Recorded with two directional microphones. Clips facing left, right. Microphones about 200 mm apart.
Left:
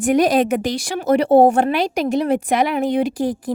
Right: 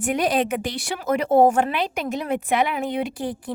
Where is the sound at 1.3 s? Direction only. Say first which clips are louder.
Left 3 dB; 35° left (ahead or behind).